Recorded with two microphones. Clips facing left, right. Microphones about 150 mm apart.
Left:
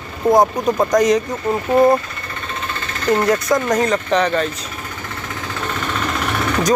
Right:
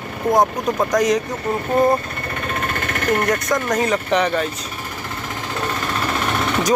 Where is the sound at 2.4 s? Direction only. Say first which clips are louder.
Right 3 dB; 60° right (ahead or behind).